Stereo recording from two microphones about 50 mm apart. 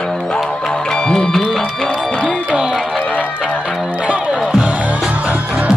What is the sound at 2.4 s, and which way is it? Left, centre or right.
Music, centre.